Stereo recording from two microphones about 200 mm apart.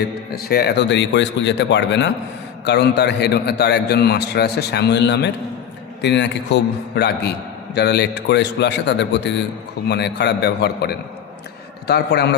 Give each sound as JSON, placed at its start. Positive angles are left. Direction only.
{"t": 0.3, "sound": "a man's voice", "side_deg": 50}